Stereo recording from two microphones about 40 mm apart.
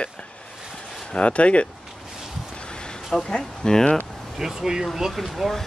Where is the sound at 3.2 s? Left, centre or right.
Centre.